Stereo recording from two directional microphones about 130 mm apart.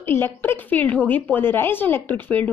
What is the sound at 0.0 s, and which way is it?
A woman's voice, 15° left (ahead or behind).